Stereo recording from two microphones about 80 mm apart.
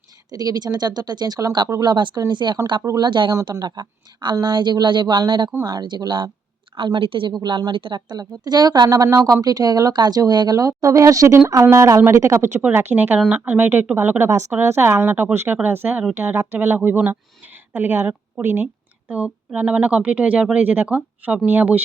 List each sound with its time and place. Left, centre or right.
0.3 s a woman's voice: right
1.8 s a woman's voice: right
2.8 s speech: right
3.1 s speech: right
3.5 s a woman's voice: right
6.7 s a woman's voice: right
7.4 s a woman's voice: right; by 21.8 s centre